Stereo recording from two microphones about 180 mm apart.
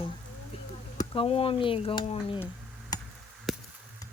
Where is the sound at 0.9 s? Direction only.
30° left (ahead or behind).